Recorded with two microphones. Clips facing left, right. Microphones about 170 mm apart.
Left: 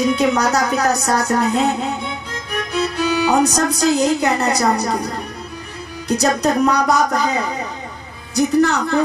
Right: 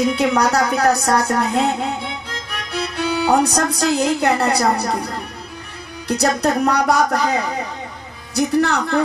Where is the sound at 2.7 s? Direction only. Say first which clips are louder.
Left 2 dB; 65° right (ahead or behind).